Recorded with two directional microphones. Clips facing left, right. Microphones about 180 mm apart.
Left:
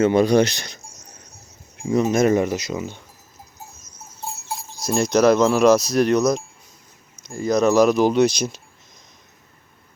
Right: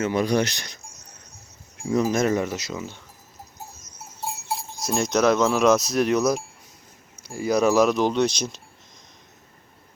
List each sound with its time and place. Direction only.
0.0 s speech: 30° left (ahead or behind)
1.9 s speech: centre (ahead or behind)
2.2 s speech: 15° left (ahead or behind)
4.8 s speech: centre (ahead or behind)